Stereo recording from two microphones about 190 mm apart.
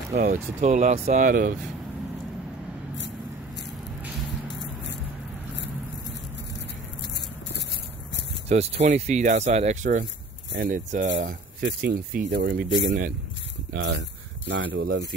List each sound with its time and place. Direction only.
0.2 s speech: 40° right (ahead or behind)
8.5 s speech: 35° right (ahead or behind); by 15.0 s 70° right (ahead or behind)